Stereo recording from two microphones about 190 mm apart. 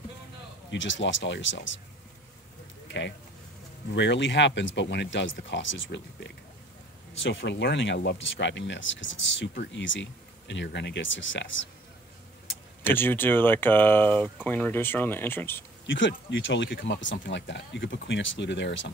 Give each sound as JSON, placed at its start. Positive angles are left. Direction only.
{"t": 0.7, "sound": "speech", "side_deg": 75}
{"t": 2.9, "sound": "speech", "side_deg": 65}
{"t": 7.2, "sound": "speech", "side_deg": 80}
{"t": 12.8, "sound": "speech", "side_deg": 10}
{"t": 15.9, "sound": "speech", "side_deg": 70}